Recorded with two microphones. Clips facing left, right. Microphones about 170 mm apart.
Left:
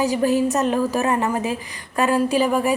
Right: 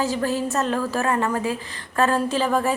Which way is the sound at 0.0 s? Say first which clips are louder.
Left 5 dB; 15° left (ahead or behind).